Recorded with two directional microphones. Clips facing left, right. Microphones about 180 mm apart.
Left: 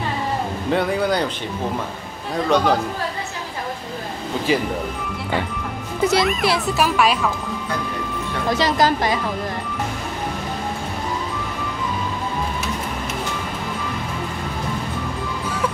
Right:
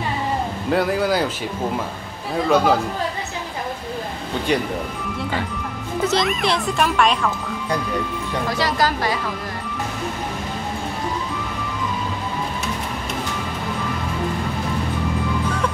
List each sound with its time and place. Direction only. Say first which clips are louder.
0.7 s speech: right 1 dB; centre (ahead or behind)
2.5 s speech: right 1 dB; 5° right (ahead or behind)
6.0 s speech: left 2 dB; 5° left (ahead or behind)
8.5 s a woman's voice: left 4 dB; 20° left (ahead or behind)